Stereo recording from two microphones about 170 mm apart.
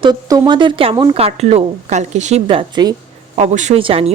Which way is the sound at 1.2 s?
35° right (ahead or behind).